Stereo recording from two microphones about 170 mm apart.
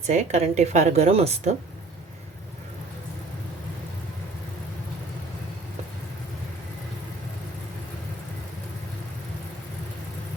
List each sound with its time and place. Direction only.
0.1 s a woman's voice: 40° right (ahead or behind)